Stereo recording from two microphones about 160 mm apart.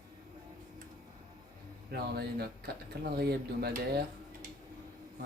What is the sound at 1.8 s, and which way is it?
Speech, 85° right.